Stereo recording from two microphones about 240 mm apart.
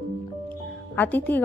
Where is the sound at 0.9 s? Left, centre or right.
Centre.